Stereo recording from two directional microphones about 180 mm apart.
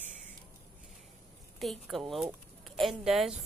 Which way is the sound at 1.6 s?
Centre (ahead or behind).